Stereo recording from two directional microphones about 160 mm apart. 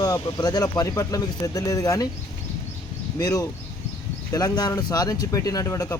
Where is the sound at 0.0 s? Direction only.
25° left (ahead or behind).